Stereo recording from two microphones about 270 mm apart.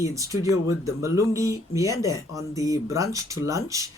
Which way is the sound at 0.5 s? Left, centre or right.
Left.